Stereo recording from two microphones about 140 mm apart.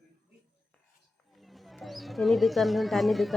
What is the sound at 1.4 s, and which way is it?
A woman's voice, centre (ahead or behind).